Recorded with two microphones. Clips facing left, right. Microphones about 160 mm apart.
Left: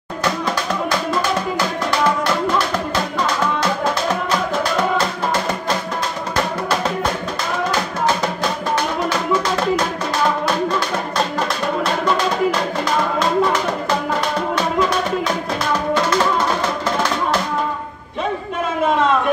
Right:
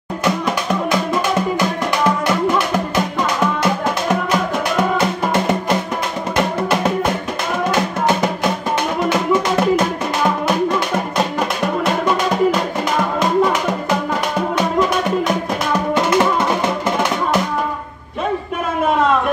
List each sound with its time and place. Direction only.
0.2 s music: 20° right (ahead or behind)
7.7 s music: 20° right (ahead or behind)
11.8 s music: 20° right (ahead or behind)
15.9 s music: 20° right (ahead or behind)